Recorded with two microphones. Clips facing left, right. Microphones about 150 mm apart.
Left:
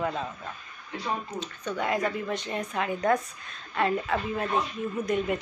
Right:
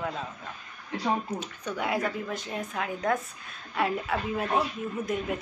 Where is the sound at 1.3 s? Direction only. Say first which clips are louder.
Left 1 dB; 10° right (ahead or behind).